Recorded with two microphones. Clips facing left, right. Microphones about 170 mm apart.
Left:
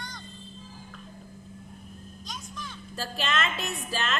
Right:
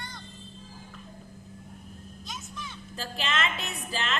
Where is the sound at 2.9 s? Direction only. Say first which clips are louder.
Left 2 dB; 20° right (ahead or behind).